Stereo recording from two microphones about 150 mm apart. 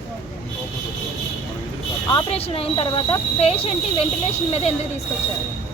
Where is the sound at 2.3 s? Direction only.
40° left (ahead or behind).